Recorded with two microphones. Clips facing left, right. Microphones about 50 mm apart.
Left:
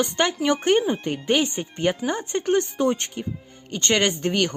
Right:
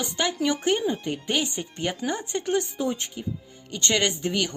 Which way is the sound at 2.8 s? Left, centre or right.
Left.